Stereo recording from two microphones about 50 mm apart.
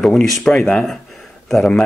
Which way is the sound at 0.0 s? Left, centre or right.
Centre.